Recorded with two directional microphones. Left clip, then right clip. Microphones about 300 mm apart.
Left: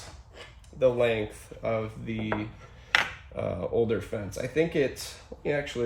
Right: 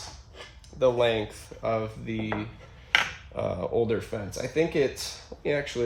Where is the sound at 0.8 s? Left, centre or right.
Centre.